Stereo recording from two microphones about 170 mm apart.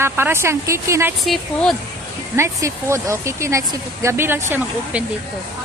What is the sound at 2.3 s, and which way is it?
Speech, 15° right (ahead or behind).